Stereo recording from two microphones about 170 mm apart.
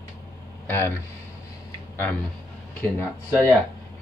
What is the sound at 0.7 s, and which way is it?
Speech, 10° left (ahead or behind).